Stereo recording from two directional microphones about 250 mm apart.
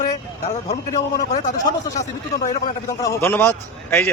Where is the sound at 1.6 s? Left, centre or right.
Centre.